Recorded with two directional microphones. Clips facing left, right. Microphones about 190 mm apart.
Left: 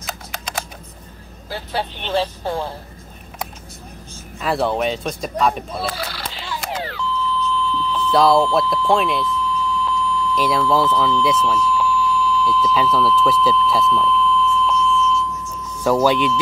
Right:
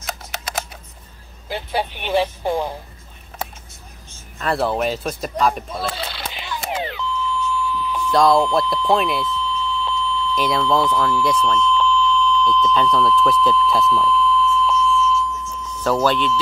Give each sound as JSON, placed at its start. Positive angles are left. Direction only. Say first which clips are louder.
{"t": 0.0, "sound": "typing", "louder": "even", "side_deg": -5}
{"t": 1.5, "sound": "speech", "louder": "right 2 dB", "side_deg": -15}
{"t": 4.4, "sound": "speech", "louder": "left 1 dB", "side_deg": 0}
{"t": 5.9, "sound": "beep", "louder": "left 1 dB", "side_deg": -25}
{"t": 8.1, "sound": "speech", "louder": "left 1 dB", "side_deg": 5}
{"t": 9.4, "sound": "beep", "louder": "left 2 dB", "side_deg": -25}
{"t": 10.3, "sound": "speech", "louder": "left 1 dB", "side_deg": 0}
{"t": 11.2, "sound": "smoke detector", "louder": "even", "side_deg": 5}
{"t": 15.8, "sound": "speech", "louder": "left 2 dB", "side_deg": 10}